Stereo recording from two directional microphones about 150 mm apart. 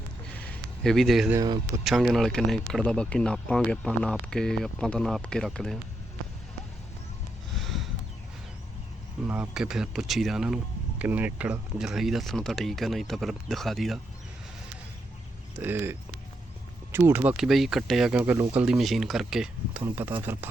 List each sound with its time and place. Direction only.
0.3 s a sound: 5° left (ahead or behind)
1.8 s speech: centre (ahead or behind)
7.5 s a sound: centre (ahead or behind)
9.2 s speech: 10° right (ahead or behind)
15.5 s speech: 15° right (ahead or behind)
18.2 s speech: 15° right (ahead or behind)
19.8 s speech: 15° right (ahead or behind)